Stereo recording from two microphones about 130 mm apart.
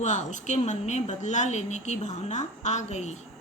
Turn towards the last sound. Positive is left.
turn(degrees=60)  # may be behind; listen again after turning